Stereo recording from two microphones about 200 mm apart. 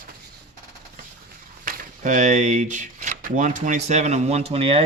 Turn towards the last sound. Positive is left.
turn(degrees=-30)  # may be behind; listen again after turning